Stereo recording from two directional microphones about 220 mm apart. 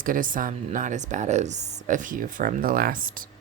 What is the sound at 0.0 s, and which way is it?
Speech, 40° right (ahead or behind).